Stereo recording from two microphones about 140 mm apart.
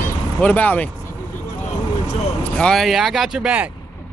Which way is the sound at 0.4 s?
10° left (ahead or behind).